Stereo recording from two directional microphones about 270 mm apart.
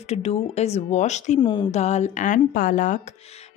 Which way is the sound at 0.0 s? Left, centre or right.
Left.